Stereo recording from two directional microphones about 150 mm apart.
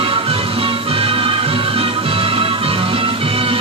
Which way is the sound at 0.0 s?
35° right (ahead or behind).